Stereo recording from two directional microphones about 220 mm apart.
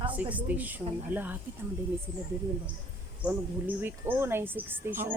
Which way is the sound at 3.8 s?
10° right (ahead or behind).